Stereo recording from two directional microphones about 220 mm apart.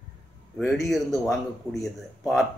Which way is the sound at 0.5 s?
Centre (ahead or behind).